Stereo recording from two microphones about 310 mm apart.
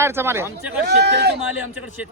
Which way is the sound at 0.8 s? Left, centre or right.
Right.